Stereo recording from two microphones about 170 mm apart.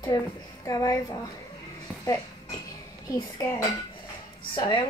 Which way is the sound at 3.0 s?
20° left (ahead or behind).